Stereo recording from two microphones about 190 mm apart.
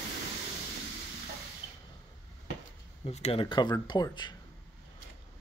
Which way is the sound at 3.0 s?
35° left (ahead or behind).